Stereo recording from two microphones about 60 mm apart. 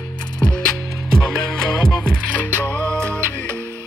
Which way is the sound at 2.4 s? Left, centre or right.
Left.